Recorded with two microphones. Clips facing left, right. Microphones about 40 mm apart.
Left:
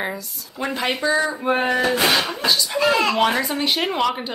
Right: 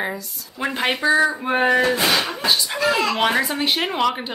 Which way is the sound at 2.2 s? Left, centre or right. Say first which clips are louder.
Even; right.